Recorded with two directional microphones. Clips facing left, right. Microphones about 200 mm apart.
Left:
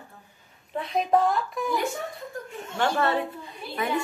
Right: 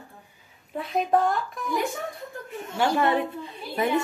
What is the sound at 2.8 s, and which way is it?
Speech, 15° right (ahead or behind).